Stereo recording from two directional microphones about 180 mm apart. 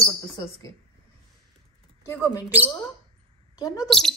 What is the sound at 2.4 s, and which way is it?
Speech, 10° right (ahead or behind).